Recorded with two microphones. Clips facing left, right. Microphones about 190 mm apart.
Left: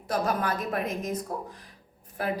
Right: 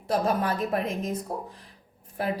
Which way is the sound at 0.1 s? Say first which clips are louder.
Right 2 dB; 30° right (ahead or behind).